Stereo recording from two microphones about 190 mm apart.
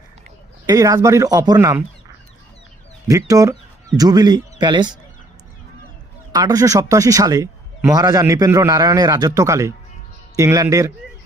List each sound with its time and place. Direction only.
0.7 s speech: 15° right (ahead or behind)
3.1 s speech: 20° right (ahead or behind)
6.3 s a man's voice: 20° right (ahead or behind)